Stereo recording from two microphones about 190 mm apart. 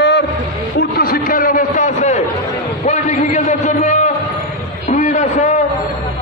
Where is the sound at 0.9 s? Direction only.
50° left (ahead or behind).